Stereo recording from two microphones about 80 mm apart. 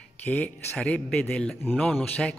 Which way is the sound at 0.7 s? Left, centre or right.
Centre.